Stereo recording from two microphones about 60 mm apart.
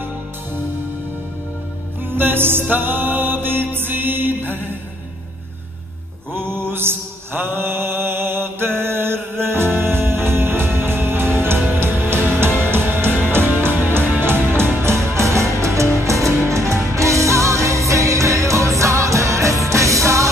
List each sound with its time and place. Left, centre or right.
2.1 s music: right
2.7 s mantra: right
6.3 s mantra: right
11.6 s music: right